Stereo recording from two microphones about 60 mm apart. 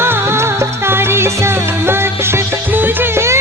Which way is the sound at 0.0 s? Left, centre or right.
Right.